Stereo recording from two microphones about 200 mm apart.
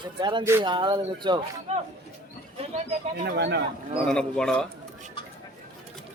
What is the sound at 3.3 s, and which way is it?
Speech, 60° right (ahead or behind).